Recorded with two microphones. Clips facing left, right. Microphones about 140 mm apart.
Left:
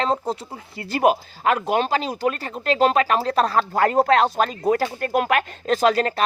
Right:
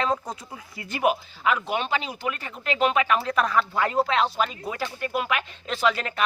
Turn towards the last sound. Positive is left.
turn(degrees=40)  # may be behind; listen again after turning